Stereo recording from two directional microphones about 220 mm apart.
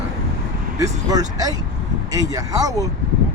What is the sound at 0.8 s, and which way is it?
Speech, 15° right (ahead or behind).